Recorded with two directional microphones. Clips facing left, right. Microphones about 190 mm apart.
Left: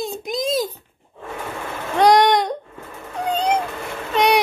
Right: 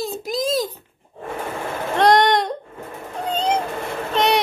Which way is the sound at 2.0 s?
Centre (ahead or behind).